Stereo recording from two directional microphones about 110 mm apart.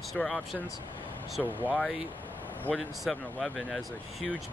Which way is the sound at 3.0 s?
5° left (ahead or behind).